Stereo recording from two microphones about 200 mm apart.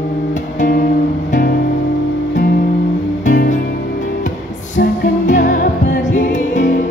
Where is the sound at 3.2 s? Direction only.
50° left (ahead or behind).